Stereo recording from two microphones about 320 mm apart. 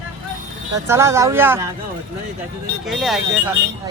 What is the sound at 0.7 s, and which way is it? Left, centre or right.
Speech, centre.